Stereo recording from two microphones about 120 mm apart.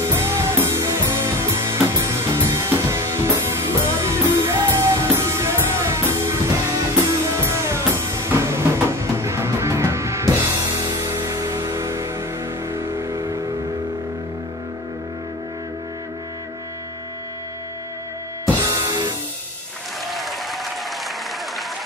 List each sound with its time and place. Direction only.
0.1 s music: 20° right (ahead or behind)
12.7 s vehicle: 20° right (ahead or behind)
18.6 s music: 25° right (ahead or behind)
20.1 s applause: centre (ahead or behind)